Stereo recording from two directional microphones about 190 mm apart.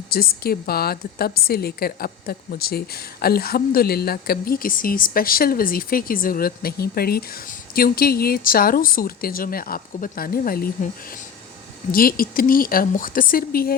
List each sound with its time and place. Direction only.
0.1 s a woman's voice: 55° left (ahead or behind)
11.9 s a woman's voice: 50° left (ahead or behind)